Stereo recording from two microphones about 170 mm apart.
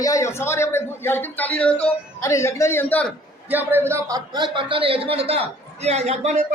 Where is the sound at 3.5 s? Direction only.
10° right (ahead or behind).